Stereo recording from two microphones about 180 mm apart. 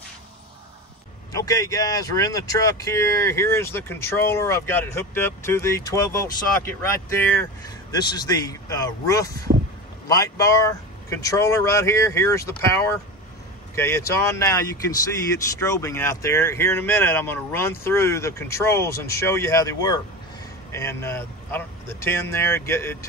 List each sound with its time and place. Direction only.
1.3 s speech: 20° left (ahead or behind)
7.9 s speech: 25° left (ahead or behind)